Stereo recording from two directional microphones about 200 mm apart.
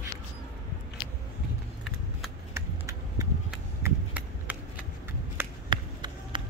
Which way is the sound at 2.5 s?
15° right (ahead or behind).